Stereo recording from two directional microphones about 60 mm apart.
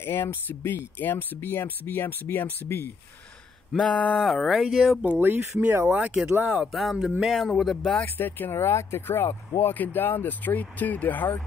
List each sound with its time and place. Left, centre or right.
0.0 s speech: left
3.7 s a sound: centre
4.2 s speech: centre
5.2 s speech: right
5.9 s speech: right
6.7 s speech: centre
7.7 s a sound: centre
8.0 s speech: left